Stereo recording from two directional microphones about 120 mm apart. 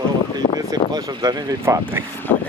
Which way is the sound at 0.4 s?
50° left (ahead or behind).